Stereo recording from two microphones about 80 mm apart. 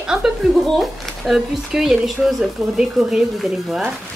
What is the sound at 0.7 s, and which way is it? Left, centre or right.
Speech, centre.